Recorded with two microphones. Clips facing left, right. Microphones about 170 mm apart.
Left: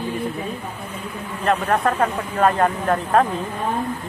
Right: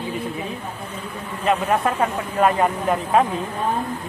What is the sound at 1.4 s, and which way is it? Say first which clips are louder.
Speech: even; 5° right (ahead or behind).